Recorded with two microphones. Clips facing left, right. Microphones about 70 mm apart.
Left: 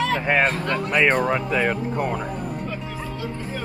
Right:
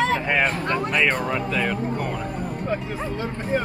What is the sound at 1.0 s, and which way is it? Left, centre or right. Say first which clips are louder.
Speech: left 3 dB; centre.